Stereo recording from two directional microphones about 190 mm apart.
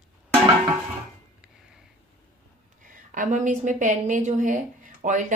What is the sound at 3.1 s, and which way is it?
A woman's voice, 40° right (ahead or behind).